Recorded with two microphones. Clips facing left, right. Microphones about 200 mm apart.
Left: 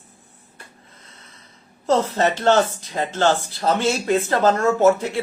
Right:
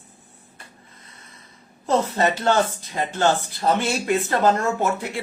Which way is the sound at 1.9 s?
10° right (ahead or behind).